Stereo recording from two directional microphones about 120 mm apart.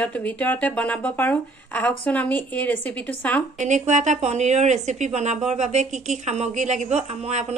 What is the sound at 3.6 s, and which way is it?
Speech, 85° right.